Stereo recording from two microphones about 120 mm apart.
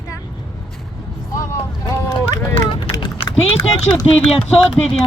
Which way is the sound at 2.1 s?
45° left (ahead or behind).